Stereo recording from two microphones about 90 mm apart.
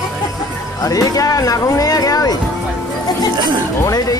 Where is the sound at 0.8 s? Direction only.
40° left (ahead or behind).